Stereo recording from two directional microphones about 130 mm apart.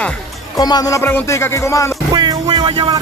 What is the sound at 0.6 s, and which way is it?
Speech, 30° left (ahead or behind).